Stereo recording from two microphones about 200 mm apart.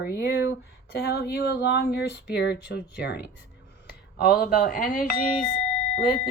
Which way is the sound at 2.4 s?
55° left (ahead or behind).